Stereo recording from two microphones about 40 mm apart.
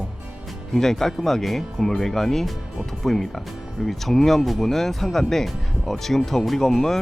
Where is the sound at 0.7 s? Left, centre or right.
Centre.